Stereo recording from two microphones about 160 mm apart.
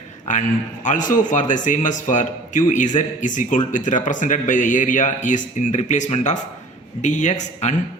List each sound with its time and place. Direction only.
0.9 s speech: 55° left (ahead or behind)